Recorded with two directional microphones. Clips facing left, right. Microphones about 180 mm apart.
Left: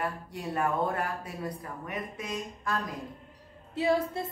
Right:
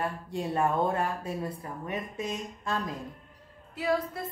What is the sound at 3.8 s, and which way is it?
Speech, 25° left (ahead or behind).